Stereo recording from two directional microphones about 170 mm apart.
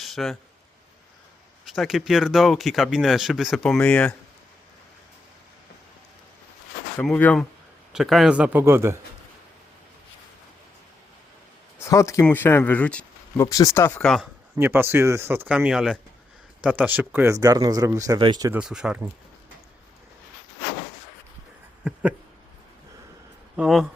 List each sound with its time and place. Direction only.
0.0 s a sound: centre (ahead or behind)
1.6 s speech: centre (ahead or behind)
7.0 s speech: 5° left (ahead or behind); by 9.0 s 15° right (ahead or behind)
11.9 s speech: 20° left (ahead or behind)
14.5 s speech: 15° right (ahead or behind)
18.5 s speech: 5° right (ahead or behind)
23.6 s speech: centre (ahead or behind)